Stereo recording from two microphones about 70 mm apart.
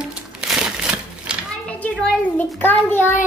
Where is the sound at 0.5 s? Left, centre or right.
Centre.